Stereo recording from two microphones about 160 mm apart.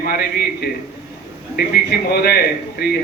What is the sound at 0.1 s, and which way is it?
A man's voice, 75° left (ahead or behind).